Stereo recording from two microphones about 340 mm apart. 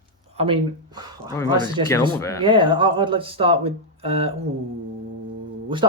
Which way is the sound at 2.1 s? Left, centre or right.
Centre.